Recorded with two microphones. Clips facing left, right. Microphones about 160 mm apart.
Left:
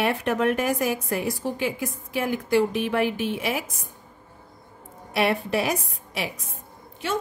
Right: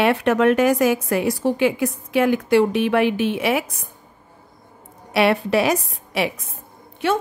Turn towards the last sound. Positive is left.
turn(degrees=-60)  # may be behind; listen again after turning